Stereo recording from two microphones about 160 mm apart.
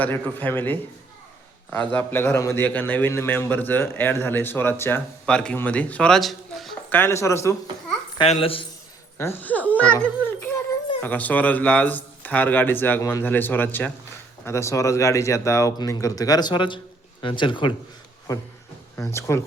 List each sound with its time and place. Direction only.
0.0 s a man's voice: 10° left (ahead or behind)
6.9 s a man's voice: 15° left (ahead or behind)
8.2 s speech: 35° left (ahead or behind)
9.1 s a man's voice: 15° left (ahead or behind); by 17.7 s 30° left (ahead or behind)
18.9 s a man's voice: 15° left (ahead or behind)